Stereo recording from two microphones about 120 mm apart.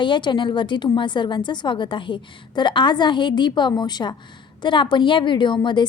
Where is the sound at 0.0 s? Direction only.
40° left (ahead or behind).